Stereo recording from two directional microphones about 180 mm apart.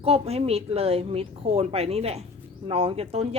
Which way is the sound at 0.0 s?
35° right (ahead or behind).